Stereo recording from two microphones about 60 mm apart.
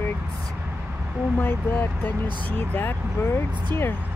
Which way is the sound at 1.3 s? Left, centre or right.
Left.